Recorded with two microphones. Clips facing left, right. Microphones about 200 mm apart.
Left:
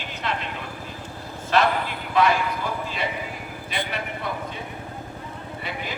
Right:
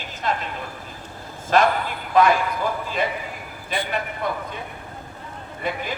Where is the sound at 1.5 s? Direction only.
45° right (ahead or behind).